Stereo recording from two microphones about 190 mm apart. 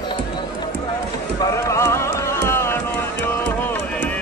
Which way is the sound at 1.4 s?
15° left (ahead or behind).